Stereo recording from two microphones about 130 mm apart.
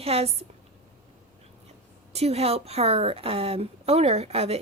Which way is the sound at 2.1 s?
55° right (ahead or behind).